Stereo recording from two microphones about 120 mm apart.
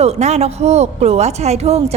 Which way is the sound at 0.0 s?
65° right (ahead or behind).